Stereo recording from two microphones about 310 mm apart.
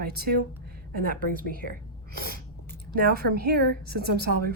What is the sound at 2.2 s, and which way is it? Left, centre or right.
Sneeze, right.